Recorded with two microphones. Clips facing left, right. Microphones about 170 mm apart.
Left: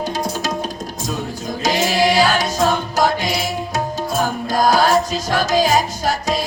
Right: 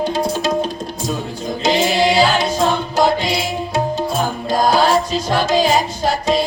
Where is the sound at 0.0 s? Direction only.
30° right (ahead or behind).